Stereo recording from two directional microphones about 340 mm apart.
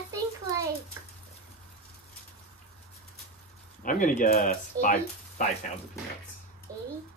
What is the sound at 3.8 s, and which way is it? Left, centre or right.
Speech, left.